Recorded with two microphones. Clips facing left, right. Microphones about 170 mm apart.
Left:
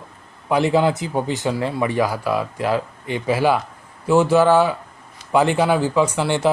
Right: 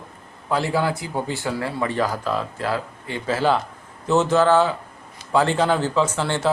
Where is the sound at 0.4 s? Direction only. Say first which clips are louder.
Left 5 dB; 20° left (ahead or behind).